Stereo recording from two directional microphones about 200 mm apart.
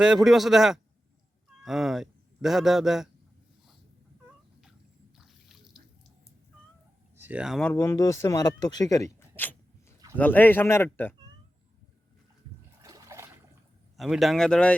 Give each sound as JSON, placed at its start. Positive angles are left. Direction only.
{"t": 0.0, "sound": "speech", "side_deg": 0}
{"t": 5.1, "sound": "a sound", "side_deg": 0}
{"t": 7.2, "sound": "speech", "side_deg": -5}
{"t": 7.7, "sound": "speech", "side_deg": 10}
{"t": 12.8, "sound": "trickle", "side_deg": -15}
{"t": 13.9, "sound": "speech", "side_deg": 0}